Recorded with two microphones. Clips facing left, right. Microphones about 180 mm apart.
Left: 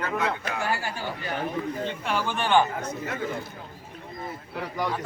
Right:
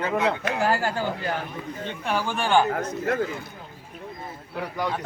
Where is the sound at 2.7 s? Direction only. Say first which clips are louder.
Right 6 dB; 55° right (ahead or behind).